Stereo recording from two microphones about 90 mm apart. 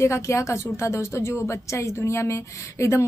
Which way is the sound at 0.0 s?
35° left (ahead or behind).